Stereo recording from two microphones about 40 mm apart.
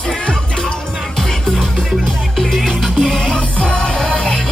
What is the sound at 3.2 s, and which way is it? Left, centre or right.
Music, left.